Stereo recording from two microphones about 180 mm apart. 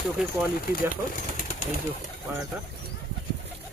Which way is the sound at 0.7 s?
50° left (ahead or behind).